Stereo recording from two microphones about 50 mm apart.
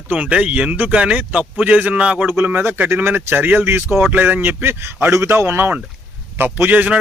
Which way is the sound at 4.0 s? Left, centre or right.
Right.